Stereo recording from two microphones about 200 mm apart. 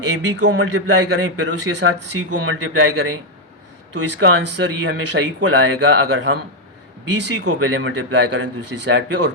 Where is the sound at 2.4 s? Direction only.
90° right.